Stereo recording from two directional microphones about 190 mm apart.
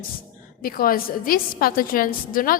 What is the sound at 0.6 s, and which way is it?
A woman's voice, 50° left (ahead or behind).